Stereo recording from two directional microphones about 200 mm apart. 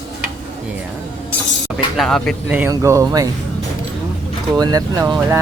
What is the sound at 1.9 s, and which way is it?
Speech, 5° left (ahead or behind).